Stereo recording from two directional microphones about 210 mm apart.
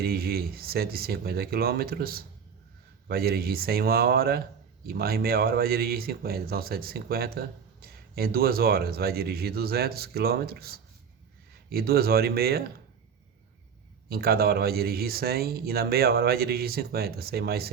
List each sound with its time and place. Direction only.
0.0 s speech: 45° right (ahead or behind)
14.1 s speech: 45° right (ahead or behind)